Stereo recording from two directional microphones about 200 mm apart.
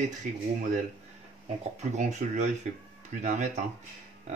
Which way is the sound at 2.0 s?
35° right (ahead or behind).